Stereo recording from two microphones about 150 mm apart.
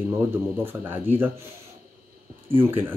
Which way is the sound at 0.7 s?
15° right (ahead or behind).